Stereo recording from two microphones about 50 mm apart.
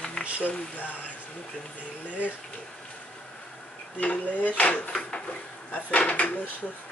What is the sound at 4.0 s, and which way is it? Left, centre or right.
Speech, left.